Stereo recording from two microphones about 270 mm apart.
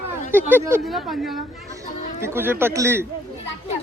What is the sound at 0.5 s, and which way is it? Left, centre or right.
Speech, centre.